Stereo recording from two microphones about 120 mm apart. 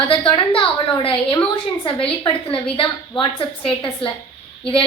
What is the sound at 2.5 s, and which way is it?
A woman's voice, 45° left (ahead or behind).